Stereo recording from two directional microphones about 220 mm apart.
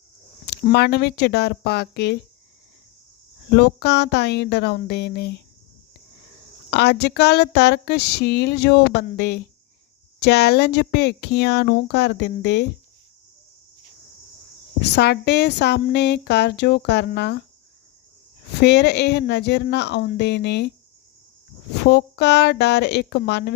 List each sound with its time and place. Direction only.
0.4 s speech: 50° left (ahead or behind)
3.5 s speech: 50° left (ahead or behind)
6.7 s speech: 50° left (ahead or behind)
14.8 s speech: 50° left (ahead or behind)
18.6 s speech: 50° left (ahead or behind)
21.8 s speech: 50° left (ahead or behind)